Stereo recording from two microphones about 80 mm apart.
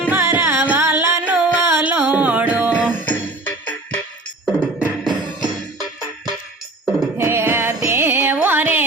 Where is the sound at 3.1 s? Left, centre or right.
Left.